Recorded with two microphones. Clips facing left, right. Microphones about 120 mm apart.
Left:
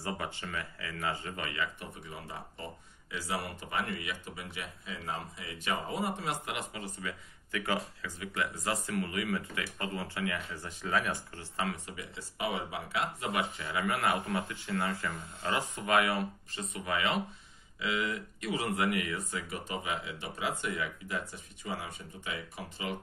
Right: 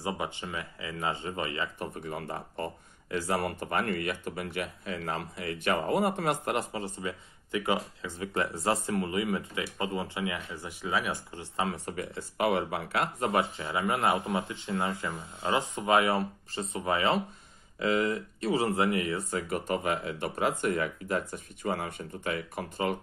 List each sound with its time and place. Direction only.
0.0 s speech: 20° right (ahead or behind)
2.0 s speech: 60° right (ahead or behind)
6.5 s speech: 35° right (ahead or behind); by 8.1 s 20° right (ahead or behind)
8.2 s speech: 35° right (ahead or behind)
11.8 s speech: 50° right (ahead or behind)
13.2 s speech: 35° right (ahead or behind)
19.5 s speech: 50° right (ahead or behind)